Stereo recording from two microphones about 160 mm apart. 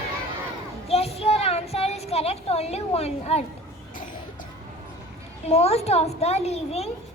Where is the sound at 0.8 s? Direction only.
40° left (ahead or behind).